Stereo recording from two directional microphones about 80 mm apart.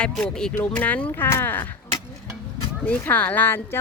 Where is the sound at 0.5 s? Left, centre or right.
Left.